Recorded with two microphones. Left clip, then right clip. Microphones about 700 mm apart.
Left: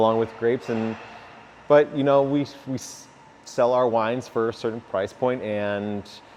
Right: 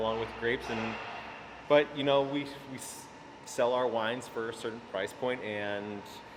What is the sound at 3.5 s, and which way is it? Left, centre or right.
Speech, left.